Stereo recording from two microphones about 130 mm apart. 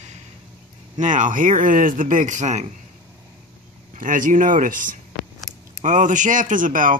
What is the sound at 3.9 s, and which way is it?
Speech, 90° right.